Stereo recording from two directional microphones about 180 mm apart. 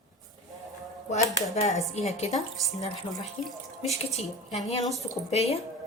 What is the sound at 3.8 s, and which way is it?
Speech, 35° left (ahead or behind).